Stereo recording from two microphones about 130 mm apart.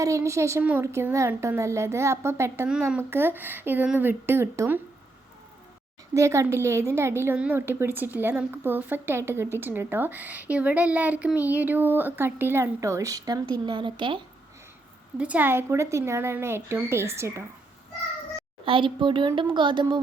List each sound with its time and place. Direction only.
0.0 s a woman's voice: 25° right (ahead or behind)
2.6 s a child's voice: 5° right (ahead or behind)
3.0 s a child's voice: 20° right (ahead or behind)
6.1 s a child's voice: 20° right (ahead or behind); by 14.2 s 40° right (ahead or behind)
15.2 s a woman's voice: 10° right (ahead or behind)
18.6 s speech: 40° right (ahead or behind)